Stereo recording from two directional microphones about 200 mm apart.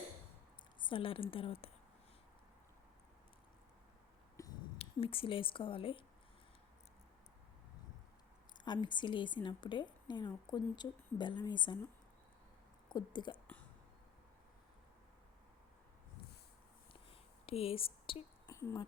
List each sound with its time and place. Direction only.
0.9 s a woman's voice: 25° left (ahead or behind)
4.4 s a sound: 15° left (ahead or behind)
4.8 s a woman's voice: 30° left (ahead or behind)
8.6 s a woman's voice: 20° left (ahead or behind)
12.9 s a woman's voice: 20° left (ahead or behind)
16.9 s a sound: 30° left (ahead or behind)
18.5 s speech: 15° left (ahead or behind)